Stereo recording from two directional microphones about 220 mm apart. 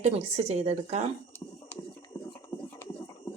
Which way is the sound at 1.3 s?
10° left (ahead or behind).